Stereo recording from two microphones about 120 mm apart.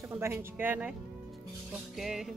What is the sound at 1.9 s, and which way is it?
Speech, centre (ahead or behind).